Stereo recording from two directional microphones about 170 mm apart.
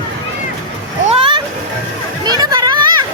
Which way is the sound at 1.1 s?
30° right (ahead or behind).